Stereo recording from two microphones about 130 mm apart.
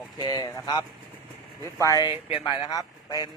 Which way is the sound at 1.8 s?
30° left (ahead or behind).